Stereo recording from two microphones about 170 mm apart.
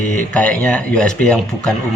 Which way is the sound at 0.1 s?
5° left (ahead or behind).